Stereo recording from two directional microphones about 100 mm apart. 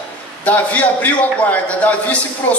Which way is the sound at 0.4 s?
15° left (ahead or behind).